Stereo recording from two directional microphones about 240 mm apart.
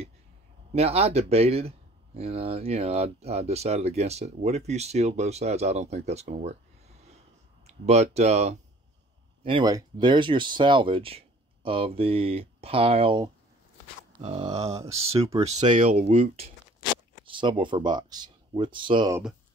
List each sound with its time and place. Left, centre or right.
0.7 s speech: right
7.6 s speech: right